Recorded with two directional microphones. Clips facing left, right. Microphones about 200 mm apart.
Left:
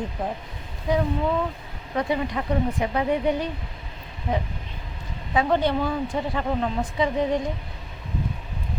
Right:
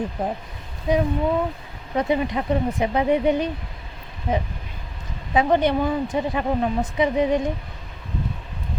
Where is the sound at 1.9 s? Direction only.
20° right (ahead or behind).